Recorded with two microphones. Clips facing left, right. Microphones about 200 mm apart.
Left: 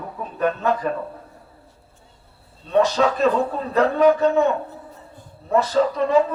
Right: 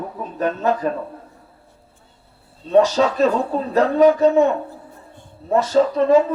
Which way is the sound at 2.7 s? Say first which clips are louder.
Right 3 dB; 35° right (ahead or behind).